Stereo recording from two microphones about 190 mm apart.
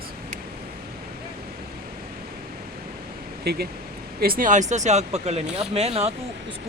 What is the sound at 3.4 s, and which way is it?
Speech, 55° right (ahead or behind).